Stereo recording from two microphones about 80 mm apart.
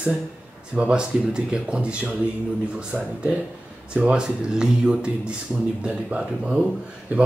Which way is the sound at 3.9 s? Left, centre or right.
Centre.